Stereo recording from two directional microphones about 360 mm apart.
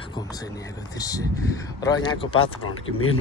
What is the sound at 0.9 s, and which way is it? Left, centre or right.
Speech, centre.